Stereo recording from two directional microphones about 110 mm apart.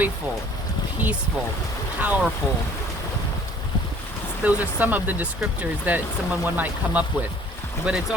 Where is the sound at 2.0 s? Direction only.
15° right (ahead or behind).